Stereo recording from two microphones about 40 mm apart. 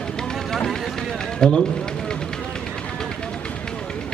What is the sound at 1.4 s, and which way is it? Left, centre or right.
Speech, left.